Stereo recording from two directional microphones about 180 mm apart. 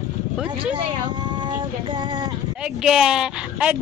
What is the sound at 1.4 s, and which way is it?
Female singing, 25° right (ahead or behind).